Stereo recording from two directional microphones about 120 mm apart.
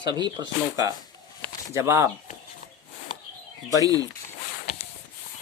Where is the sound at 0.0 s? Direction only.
40° right (ahead or behind).